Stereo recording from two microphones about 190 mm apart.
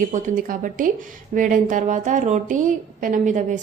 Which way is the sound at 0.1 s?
45° right (ahead or behind).